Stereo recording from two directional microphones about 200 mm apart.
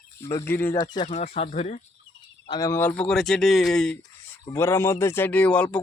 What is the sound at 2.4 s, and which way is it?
Speech, 20° left (ahead or behind).